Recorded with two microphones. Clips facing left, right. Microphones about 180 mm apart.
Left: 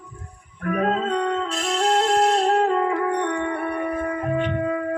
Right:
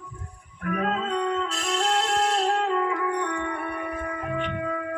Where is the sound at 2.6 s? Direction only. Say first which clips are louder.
Left 4 dB; 40° left (ahead or behind).